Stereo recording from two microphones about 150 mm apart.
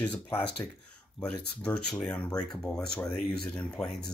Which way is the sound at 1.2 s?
10° left (ahead or behind).